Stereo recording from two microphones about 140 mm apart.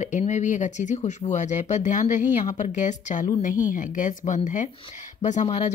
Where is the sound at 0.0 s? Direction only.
60° left (ahead or behind).